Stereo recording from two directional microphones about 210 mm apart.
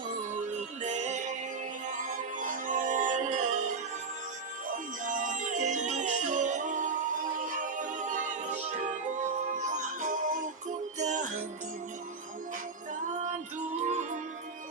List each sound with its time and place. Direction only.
0.8 s music: 35° right (ahead or behind)
4.7 s music: 40° right (ahead or behind)
13.7 s music: 35° right (ahead or behind)